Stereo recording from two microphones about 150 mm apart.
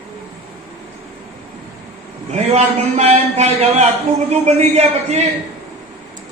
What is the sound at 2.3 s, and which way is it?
A man's voice, 50° right (ahead or behind).